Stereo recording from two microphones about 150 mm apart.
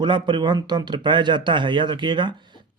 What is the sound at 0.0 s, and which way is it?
Speech, 30° right (ahead or behind).